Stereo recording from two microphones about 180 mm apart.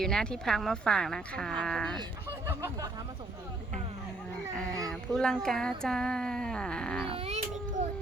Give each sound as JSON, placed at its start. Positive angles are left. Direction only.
{"t": 0.0, "sound": "speech", "side_deg": 5}
{"t": 4.9, "sound": "speech", "side_deg": 5}
{"t": 7.1, "sound": "baby cry", "side_deg": -30}